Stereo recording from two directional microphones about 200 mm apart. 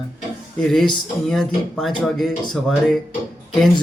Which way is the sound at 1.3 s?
Centre (ahead or behind).